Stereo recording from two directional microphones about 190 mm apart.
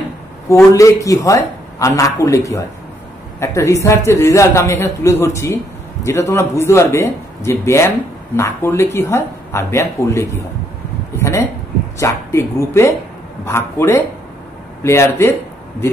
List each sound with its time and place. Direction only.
0.5 s speech: 15° left (ahead or behind)
11.1 s a sound: 15° left (ahead or behind)
12.0 s speech: 15° left (ahead or behind)